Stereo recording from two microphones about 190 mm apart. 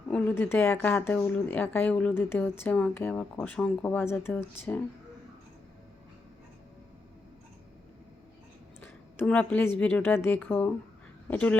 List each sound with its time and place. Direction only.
0.1 s speech: 10° left (ahead or behind)
8.8 s a woman's voice: 10° left (ahead or behind)